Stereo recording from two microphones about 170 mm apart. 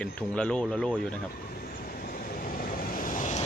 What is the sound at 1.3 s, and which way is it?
Vehicle, 60° left (ahead or behind).